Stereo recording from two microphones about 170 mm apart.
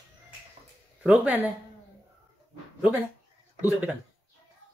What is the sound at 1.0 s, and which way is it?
Speech, 10° right (ahead or behind).